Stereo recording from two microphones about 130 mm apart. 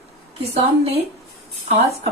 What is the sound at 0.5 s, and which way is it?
Speech, 50° right (ahead or behind).